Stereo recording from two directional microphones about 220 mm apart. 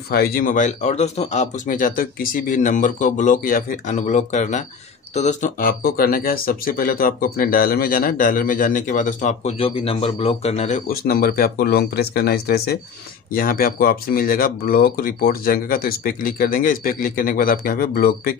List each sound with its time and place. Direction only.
0.1 s speech: 45° left (ahead or behind)
10.9 s speech: 40° left (ahead or behind)